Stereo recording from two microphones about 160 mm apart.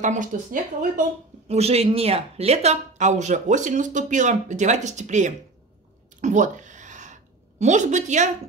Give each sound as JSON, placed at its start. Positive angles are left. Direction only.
{"t": 0.0, "sound": "speech", "side_deg": -50}
{"t": 1.5, "sound": "speech", "side_deg": -40}
{"t": 6.2, "sound": "a sound", "side_deg": -50}